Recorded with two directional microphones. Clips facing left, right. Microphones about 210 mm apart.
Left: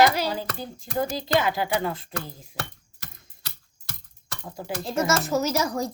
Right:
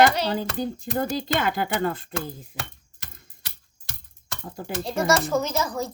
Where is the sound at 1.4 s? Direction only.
55° right (ahead or behind).